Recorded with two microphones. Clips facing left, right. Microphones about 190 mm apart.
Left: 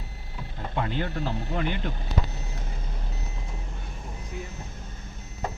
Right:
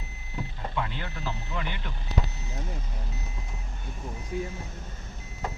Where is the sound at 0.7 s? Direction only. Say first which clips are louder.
Left 7 dB; 45° left (ahead or behind).